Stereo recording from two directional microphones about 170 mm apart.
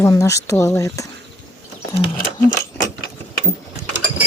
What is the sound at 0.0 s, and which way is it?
Speech, 20° left (ahead or behind).